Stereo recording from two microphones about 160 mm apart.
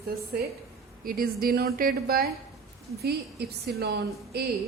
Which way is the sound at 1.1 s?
65° right (ahead or behind).